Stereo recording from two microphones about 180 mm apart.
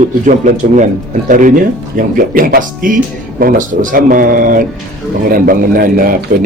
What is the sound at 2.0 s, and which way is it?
Speech, 50° right (ahead or behind).